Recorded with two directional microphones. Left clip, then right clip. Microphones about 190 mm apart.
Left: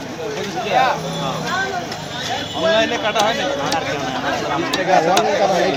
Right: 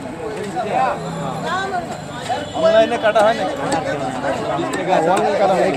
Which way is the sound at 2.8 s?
50° right (ahead or behind).